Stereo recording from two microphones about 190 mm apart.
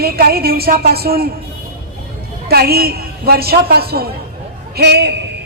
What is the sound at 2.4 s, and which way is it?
A woman's voice, 55° right (ahead or behind).